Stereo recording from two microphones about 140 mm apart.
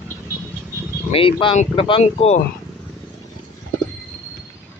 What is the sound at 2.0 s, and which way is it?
Speech, 50° left (ahead or behind).